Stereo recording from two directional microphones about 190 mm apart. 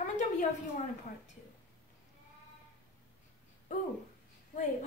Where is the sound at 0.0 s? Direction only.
40° left (ahead or behind).